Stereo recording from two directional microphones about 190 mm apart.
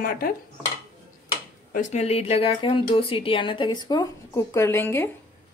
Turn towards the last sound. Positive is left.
turn(degrees=10)  # may be behind; listen again after turning